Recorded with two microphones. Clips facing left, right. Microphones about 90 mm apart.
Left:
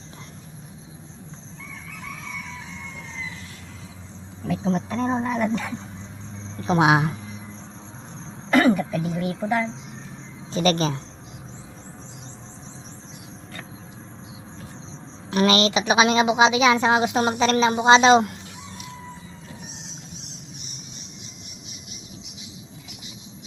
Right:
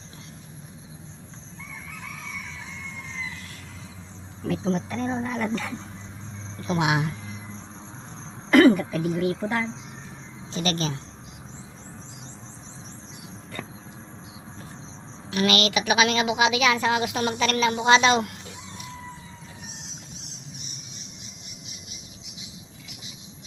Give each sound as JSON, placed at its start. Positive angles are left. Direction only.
{"t": 4.6, "sound": "a woman's voice", "side_deg": 20}
{"t": 6.6, "sound": "speech", "side_deg": 35}
{"t": 8.4, "sound": "a sound", "side_deg": 0}
{"t": 9.0, "sound": "speech", "side_deg": 0}
{"t": 10.5, "sound": "speech", "side_deg": 40}
{"t": 15.3, "sound": "a woman's voice", "side_deg": 35}